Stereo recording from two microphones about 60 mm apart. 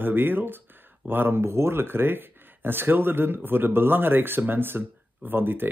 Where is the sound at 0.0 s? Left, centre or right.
Right.